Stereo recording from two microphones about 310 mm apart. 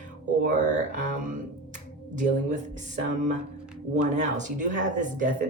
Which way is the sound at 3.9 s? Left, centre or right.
Right.